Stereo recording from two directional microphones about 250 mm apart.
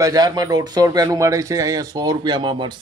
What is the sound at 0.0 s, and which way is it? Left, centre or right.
Speech, centre.